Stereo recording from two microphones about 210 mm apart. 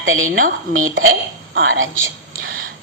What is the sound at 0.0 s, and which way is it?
Speech, 75° right (ahead or behind).